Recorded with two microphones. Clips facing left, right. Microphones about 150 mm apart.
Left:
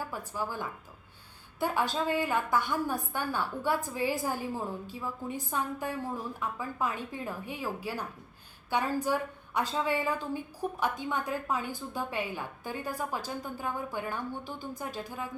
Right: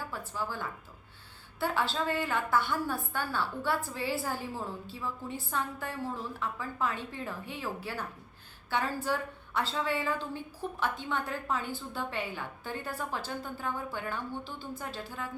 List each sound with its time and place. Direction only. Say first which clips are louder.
0.1 s a woman's voice: left 1 dB; 15° left (ahead or behind)